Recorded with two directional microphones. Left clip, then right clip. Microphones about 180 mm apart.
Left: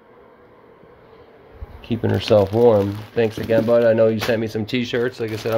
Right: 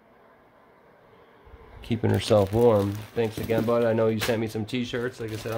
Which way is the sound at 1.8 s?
15° right (ahead or behind).